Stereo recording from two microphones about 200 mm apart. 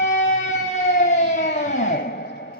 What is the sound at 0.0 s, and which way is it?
Music, 35° left (ahead or behind).